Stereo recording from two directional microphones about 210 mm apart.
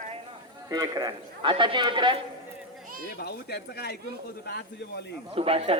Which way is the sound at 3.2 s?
50° left (ahead or behind).